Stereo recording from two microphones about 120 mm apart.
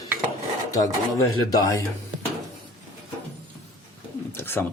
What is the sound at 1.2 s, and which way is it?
Speech, 30° left (ahead or behind).